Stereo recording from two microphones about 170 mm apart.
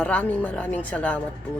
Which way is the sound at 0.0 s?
10° left (ahead or behind).